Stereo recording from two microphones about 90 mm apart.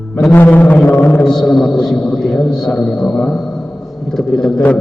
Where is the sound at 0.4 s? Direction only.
20° left (ahead or behind).